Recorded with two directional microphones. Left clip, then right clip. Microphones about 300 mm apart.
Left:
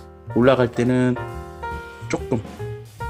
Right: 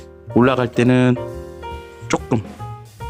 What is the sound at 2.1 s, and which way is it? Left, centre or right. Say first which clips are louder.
Music: right 4 dB; right.